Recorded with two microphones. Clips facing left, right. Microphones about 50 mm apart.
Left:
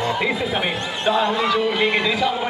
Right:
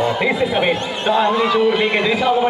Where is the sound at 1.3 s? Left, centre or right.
Centre.